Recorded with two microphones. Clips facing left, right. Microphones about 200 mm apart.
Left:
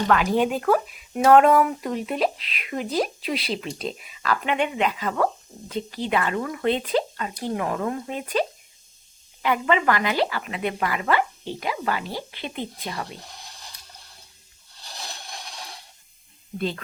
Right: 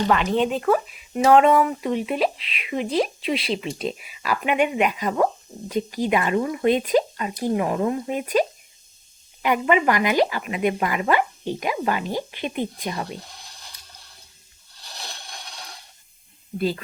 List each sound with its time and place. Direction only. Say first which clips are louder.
0.1 s speech: left 2 dB; 5° left (ahead or behind); by 13.1 s 20° right (ahead or behind)
16.6 s speech: right 4 dB; 5° right (ahead or behind)